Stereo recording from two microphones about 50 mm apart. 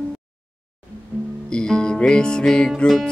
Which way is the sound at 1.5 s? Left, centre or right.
Centre.